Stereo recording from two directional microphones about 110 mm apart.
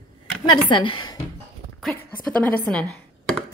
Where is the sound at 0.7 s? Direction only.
45° left (ahead or behind).